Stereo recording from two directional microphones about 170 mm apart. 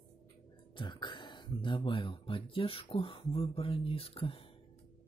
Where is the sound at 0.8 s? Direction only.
25° left (ahead or behind).